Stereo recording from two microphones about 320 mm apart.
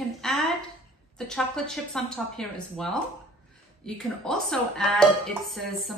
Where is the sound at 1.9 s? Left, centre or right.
Centre.